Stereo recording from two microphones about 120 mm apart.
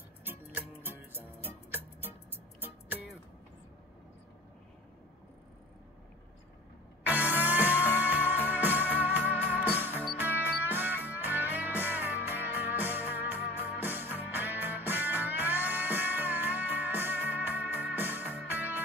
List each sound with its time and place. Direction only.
0.8 s music: 15° right (ahead or behind)
7.1 s music: 15° right (ahead or behind)